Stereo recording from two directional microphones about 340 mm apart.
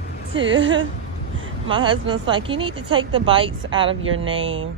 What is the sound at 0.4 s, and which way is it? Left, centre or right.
Speech, right.